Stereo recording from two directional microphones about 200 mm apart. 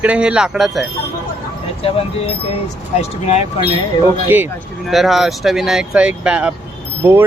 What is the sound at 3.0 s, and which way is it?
Speech, 30° left (ahead or behind).